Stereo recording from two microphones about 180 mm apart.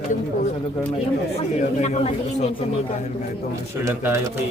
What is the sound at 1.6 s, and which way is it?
Speech, 40° left (ahead or behind).